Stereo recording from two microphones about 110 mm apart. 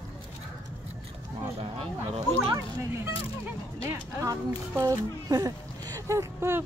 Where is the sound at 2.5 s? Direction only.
25° right (ahead or behind).